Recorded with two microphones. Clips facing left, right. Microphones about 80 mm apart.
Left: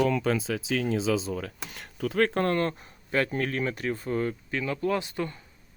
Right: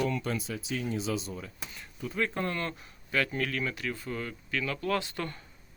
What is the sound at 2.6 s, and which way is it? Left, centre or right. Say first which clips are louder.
Speech: left 7 dB; left.